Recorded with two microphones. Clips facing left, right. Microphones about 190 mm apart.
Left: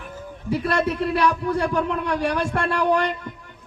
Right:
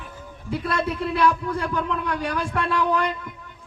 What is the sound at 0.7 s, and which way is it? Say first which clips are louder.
A man's voice: left 2 dB; 70° left (ahead or behind).